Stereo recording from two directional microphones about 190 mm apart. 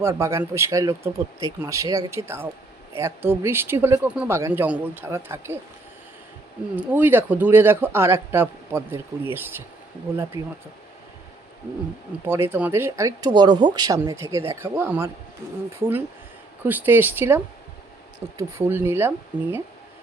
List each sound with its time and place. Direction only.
0.0 s a man's voice: 15° right (ahead or behind)
6.7 s a man's voice: 10° right (ahead or behind)
10.3 s speech: 25° left (ahead or behind)
12.2 s a man's voice: 10° right (ahead or behind)